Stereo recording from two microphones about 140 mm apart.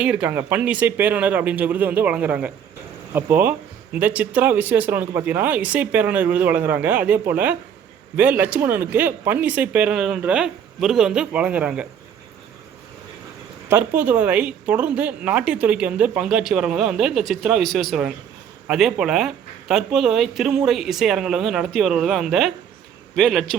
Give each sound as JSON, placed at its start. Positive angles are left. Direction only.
{"t": 0.0, "sound": "speech", "side_deg": -10}
{"t": 13.7, "sound": "a man's voice", "side_deg": -15}